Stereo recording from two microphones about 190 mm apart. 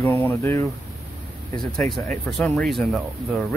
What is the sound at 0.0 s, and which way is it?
Speech, 15° left (ahead or behind).